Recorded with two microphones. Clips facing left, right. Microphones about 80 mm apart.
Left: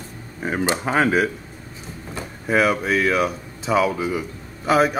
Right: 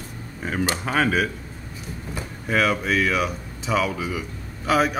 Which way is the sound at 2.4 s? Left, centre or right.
Centre.